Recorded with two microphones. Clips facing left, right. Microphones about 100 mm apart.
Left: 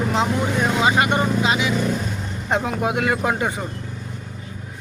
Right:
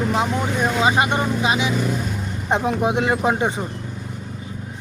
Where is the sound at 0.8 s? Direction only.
20° right (ahead or behind).